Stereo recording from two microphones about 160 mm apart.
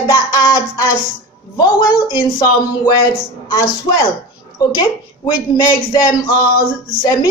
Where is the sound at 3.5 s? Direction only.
30° left (ahead or behind).